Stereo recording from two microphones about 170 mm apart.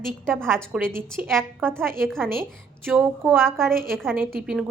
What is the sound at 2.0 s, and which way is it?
Speech, centre (ahead or behind).